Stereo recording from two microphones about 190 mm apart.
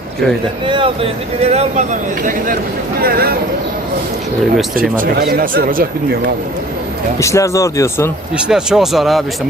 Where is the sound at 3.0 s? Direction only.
50° right (ahead or behind).